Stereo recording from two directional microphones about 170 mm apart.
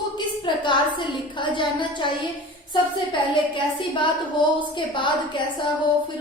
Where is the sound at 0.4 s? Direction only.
25° left (ahead or behind).